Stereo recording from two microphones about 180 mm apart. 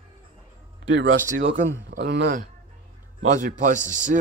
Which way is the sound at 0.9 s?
90° right.